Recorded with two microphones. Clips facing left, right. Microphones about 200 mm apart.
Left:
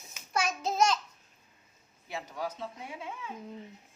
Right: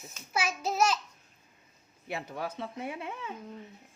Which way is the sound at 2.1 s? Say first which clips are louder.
Right 1 dB; 60° right (ahead or behind).